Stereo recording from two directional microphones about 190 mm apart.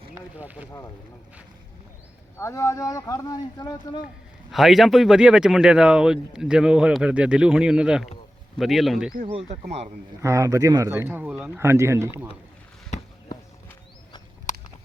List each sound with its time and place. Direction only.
0.1 s boat: 10° right (ahead or behind)
2.4 s speech: 15° left (ahead or behind)
4.5 s speech: centre (ahead or behind)
9.5 s speech: 35° right (ahead or behind)
10.2 s speech: 15° right (ahead or behind)